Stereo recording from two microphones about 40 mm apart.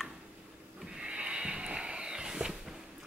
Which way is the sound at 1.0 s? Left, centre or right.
Right.